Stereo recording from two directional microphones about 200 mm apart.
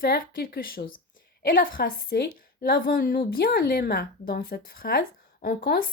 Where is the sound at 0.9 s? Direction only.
75° left (ahead or behind).